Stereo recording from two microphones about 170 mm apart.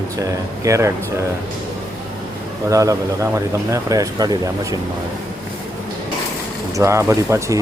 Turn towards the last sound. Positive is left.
turn(degrees=-15)  # may be behind; listen again after turning